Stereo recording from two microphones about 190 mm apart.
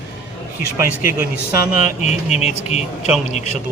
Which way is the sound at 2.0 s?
35° left (ahead or behind).